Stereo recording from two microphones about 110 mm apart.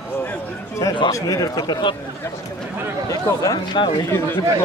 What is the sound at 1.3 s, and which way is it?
Speech, 35° left (ahead or behind).